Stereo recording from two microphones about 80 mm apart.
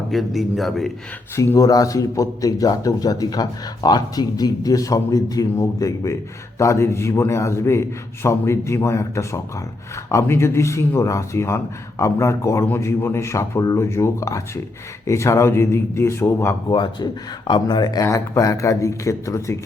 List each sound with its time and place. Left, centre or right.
0.1 s a man's voice: centre
1.5 s a man's voice: left
16.6 s speech: left
18.0 s speech: left